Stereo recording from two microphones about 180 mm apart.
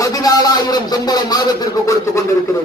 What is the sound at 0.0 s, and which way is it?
Speech, 20° left (ahead or behind).